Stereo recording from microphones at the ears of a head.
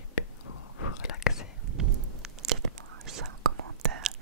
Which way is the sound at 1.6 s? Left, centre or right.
Right.